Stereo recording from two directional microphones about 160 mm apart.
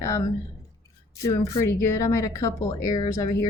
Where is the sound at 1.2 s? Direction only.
15° left (ahead or behind).